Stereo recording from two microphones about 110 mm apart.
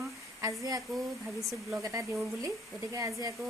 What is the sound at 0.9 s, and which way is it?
Speech, centre (ahead or behind).